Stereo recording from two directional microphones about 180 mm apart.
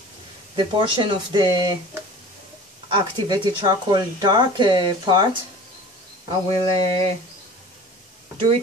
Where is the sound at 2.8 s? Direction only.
25° right (ahead or behind).